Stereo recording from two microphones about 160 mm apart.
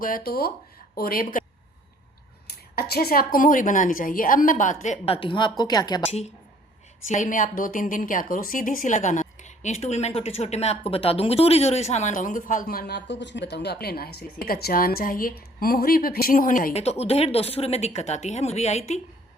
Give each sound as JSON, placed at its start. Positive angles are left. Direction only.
{"t": 0.0, "sound": "a woman's voice", "side_deg": 65}
{"t": 2.7, "sound": "a woman's voice", "side_deg": 75}
{"t": 7.1, "sound": "a woman's voice", "side_deg": 55}
{"t": 13.8, "sound": "a woman's voice", "side_deg": 75}
{"t": 16.7, "sound": "speech", "side_deg": 40}